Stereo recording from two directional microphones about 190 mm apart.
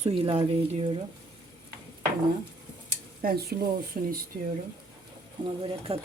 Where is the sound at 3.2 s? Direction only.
50° right (ahead or behind).